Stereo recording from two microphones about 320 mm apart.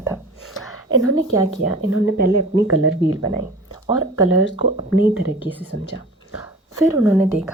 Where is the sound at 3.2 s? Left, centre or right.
Centre.